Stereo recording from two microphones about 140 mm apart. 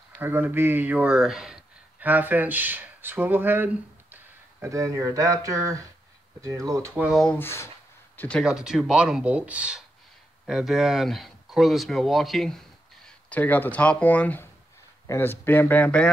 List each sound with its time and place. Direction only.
0.1 s speech: 15° right (ahead or behind)
7.0 s speech: centre (ahead or behind)
7.3 s speech: 15° left (ahead or behind)
8.4 s speech: 5° right (ahead or behind)